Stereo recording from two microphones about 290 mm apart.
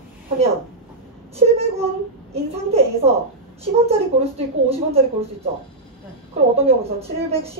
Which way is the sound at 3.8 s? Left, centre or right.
Right.